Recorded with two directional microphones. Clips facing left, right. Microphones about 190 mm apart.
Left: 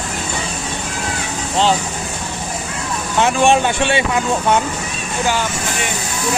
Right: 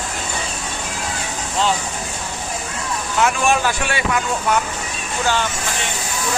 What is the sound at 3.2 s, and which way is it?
Speech, 25° left (ahead or behind).